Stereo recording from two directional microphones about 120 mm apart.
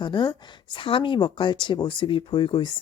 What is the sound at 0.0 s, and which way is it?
A woman's voice, 40° left (ahead or behind).